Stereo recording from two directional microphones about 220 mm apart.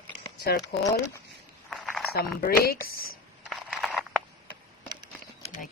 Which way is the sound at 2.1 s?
45° left (ahead or behind).